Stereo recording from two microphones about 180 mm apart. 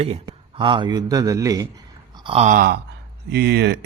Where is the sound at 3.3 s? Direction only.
65° right (ahead or behind).